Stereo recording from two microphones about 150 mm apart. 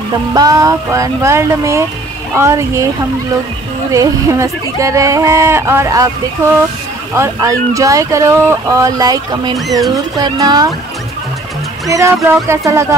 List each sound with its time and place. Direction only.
0.3 s speech: 25° right (ahead or behind)
3.9 s speech: 20° right (ahead or behind)
7.2 s speech: 20° right (ahead or behind)
11.9 s speech: 20° right (ahead or behind)